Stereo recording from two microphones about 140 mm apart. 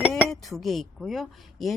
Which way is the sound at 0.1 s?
5° left (ahead or behind).